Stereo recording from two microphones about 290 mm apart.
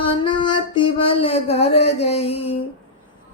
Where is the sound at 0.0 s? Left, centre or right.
Centre.